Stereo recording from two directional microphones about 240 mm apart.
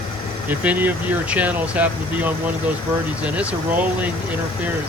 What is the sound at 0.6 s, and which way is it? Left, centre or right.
Speech, centre.